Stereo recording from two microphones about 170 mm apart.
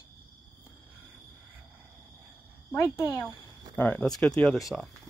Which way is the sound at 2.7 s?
15° left (ahead or behind).